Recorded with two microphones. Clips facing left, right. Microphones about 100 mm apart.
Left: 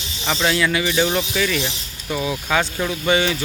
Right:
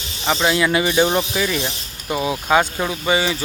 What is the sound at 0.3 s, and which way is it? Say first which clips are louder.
Speech: right 2 dB; 15° right (ahead or behind).